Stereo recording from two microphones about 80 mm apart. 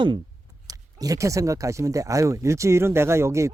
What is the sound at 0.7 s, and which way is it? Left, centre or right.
Speech, right.